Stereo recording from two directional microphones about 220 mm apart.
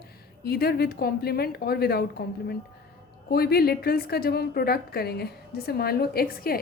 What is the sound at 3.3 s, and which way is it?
A woman's voice, 45° left (ahead or behind).